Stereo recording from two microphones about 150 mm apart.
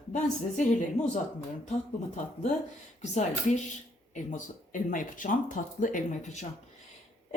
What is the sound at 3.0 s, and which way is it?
Speech, 50° left (ahead or behind).